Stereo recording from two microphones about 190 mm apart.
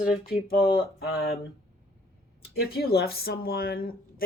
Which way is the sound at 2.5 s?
55° left (ahead or behind).